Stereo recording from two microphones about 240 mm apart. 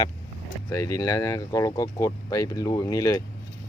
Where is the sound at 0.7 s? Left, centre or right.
Centre.